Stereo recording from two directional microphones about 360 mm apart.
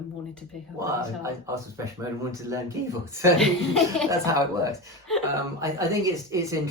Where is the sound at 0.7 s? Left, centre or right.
Centre.